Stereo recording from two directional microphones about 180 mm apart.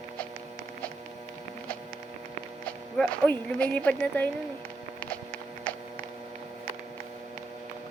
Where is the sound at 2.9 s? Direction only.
5° left (ahead or behind).